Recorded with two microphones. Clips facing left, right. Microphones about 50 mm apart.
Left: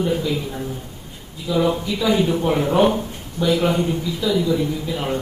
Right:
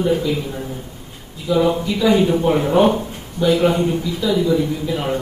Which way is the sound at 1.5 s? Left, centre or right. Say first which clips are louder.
Right 3 dB; centre.